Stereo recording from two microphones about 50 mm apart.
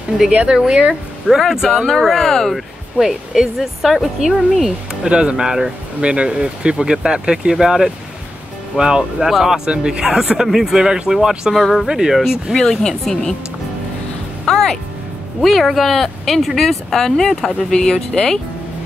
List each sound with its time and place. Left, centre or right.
0.5 s speech: centre
1.7 s speech: centre
3.0 s speech: centre
5.0 s speech: centre
11.5 s speech: centre
11.9 s speech: centre
12.5 s speech: centre
14.4 s music: centre
15.4 s speech: centre